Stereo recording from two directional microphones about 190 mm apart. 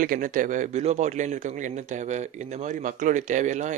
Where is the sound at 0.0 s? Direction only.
45° right (ahead or behind).